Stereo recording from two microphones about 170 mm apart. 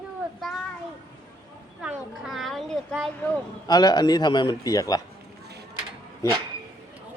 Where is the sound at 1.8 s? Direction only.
5° right (ahead or behind).